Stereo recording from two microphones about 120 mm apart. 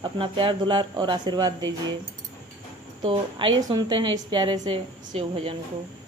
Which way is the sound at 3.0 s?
45° right (ahead or behind).